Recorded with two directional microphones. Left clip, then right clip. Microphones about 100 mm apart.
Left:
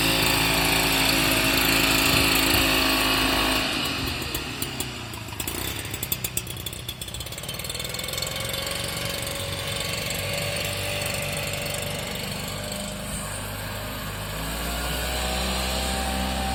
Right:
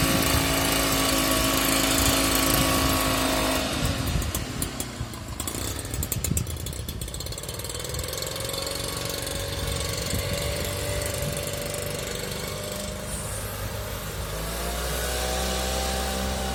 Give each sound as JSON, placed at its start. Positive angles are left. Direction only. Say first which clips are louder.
{"t": 0.0, "sound": "power tool", "louder": "left 2 dB", "side_deg": -35}